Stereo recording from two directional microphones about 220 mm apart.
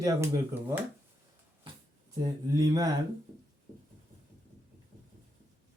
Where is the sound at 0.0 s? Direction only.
15° right (ahead or behind).